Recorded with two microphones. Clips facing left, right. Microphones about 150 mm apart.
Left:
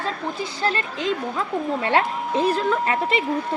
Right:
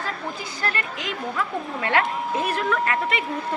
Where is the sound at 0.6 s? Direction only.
25° left (ahead or behind).